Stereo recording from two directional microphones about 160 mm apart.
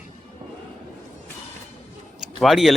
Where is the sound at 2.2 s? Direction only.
Centre (ahead or behind).